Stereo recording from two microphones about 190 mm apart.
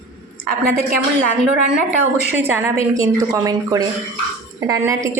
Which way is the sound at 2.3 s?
10° right (ahead or behind).